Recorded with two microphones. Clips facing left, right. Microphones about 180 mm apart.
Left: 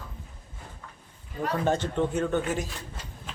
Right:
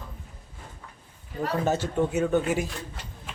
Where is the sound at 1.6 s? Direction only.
5° right (ahead or behind).